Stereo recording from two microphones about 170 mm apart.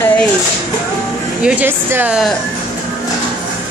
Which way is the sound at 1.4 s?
10° right (ahead or behind).